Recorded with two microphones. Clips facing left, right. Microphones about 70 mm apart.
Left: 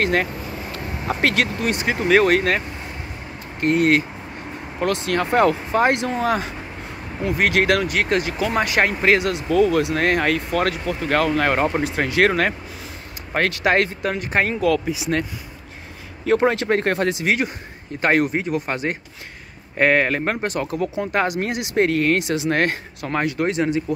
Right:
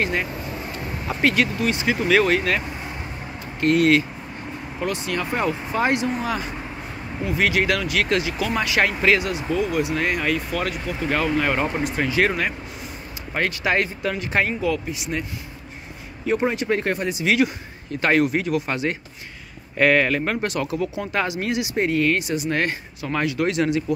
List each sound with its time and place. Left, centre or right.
0.0 s speech: left
2.0 s speech: left
3.6 s speech: left
4.8 s speech: left
5.7 s speech: left
7.2 s speech: left
9.2 s speech: left
9.9 s speech: left
14.5 s speech: left
16.3 s speech: left
16.6 s speech: left
17.2 s speech: left
23.1 s speech: left